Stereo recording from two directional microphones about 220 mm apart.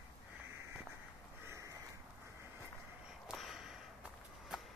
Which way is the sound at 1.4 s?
15° right (ahead or behind).